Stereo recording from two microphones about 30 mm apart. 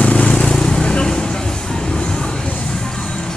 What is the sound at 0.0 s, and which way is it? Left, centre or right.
Vehicle, left.